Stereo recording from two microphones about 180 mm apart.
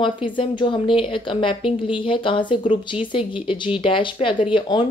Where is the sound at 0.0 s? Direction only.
30° left (ahead or behind).